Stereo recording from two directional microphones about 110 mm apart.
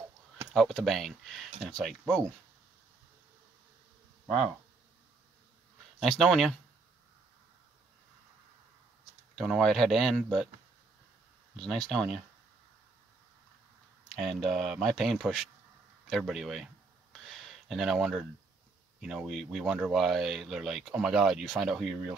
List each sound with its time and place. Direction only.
0.6 s speech: centre (ahead or behind)
5.9 s speech: 5° left (ahead or behind)
9.3 s speech: 5° left (ahead or behind)
11.5 s speech: 5° left (ahead or behind)
14.1 s speech: centre (ahead or behind)
17.1 s a sound: centre (ahead or behind)
18.9 s speech: centre (ahead or behind)